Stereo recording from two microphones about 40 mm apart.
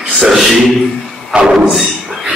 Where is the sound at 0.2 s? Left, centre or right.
Centre.